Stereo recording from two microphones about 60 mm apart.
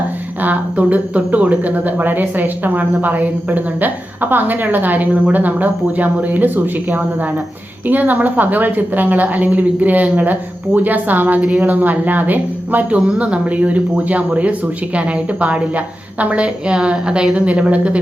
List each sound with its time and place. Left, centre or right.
0.4 s speech: right
7.9 s speech: right
13.0 s speech: centre